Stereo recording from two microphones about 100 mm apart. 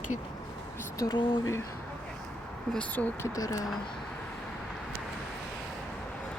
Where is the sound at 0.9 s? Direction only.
35° left (ahead or behind).